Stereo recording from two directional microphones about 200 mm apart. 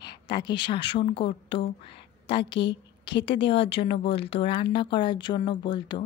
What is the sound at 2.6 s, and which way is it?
Speech, 60° left (ahead or behind).